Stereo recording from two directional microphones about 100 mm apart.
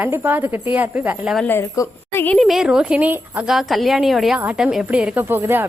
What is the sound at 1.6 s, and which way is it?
Speech, 25° left (ahead or behind).